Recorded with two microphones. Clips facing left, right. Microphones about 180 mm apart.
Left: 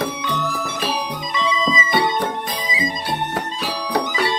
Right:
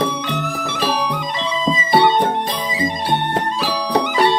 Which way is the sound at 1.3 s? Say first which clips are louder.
Left 3 dB; 60° right (ahead or behind).